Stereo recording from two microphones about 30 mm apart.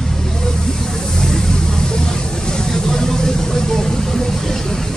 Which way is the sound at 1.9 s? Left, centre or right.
Left.